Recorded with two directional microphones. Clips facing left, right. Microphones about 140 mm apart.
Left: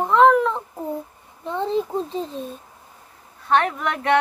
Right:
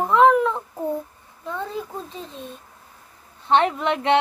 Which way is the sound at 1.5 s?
20° left (ahead or behind).